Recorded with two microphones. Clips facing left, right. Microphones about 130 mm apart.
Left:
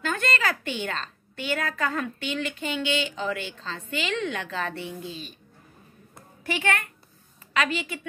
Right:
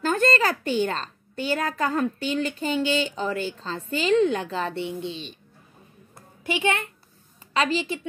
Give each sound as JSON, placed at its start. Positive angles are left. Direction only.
{"t": 0.0, "sound": "a woman's voice", "side_deg": -40}
{"t": 6.4, "sound": "a woman's voice", "side_deg": -20}